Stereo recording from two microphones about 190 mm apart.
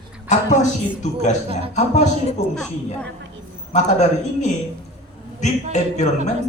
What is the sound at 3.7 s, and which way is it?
Speech, 40° left (ahead or behind).